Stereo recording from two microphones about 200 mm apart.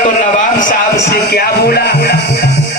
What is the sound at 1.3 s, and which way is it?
Music, 50° left (ahead or behind).